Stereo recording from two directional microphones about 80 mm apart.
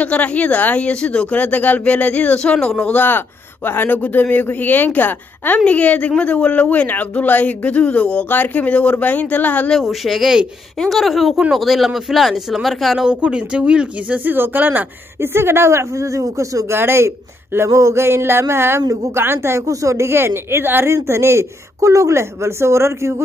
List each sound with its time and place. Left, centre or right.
0.0 s speech: centre
9.7 s speech: centre
13.1 s speech: centre; by 23.2 s right